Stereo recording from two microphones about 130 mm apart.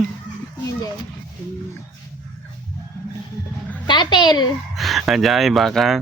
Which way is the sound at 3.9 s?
35° left (ahead or behind).